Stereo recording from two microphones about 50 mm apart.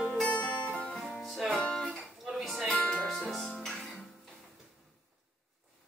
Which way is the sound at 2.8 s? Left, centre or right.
Centre.